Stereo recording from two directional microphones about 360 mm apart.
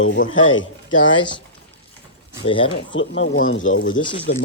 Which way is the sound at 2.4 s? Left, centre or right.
Centre.